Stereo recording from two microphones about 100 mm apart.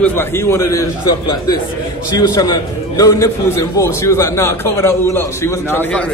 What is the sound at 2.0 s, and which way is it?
A man's voice, 40° left (ahead or behind).